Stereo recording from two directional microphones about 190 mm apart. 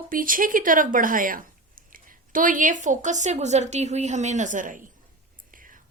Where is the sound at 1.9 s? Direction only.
45° right (ahead or behind).